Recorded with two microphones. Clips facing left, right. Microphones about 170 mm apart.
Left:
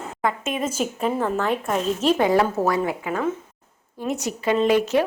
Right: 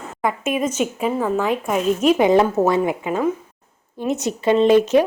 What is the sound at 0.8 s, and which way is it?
Speech, 5° right (ahead or behind).